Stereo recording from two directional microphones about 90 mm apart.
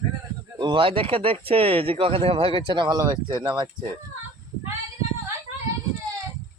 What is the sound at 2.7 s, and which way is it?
Speech, 55° right (ahead or behind).